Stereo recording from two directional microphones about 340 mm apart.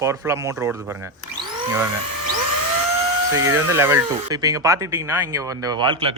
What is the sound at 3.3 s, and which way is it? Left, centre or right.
Speech, centre.